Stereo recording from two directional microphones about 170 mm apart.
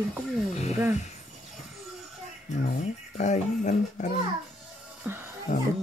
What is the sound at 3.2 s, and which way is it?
Speech, 45° left (ahead or behind).